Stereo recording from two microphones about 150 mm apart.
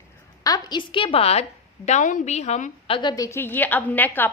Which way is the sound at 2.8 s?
35° left (ahead or behind).